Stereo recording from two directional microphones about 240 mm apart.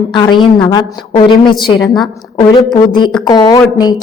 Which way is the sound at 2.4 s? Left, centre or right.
Centre.